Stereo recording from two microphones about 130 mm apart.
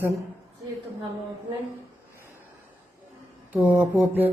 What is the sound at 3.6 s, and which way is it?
Speech, 10° right (ahead or behind).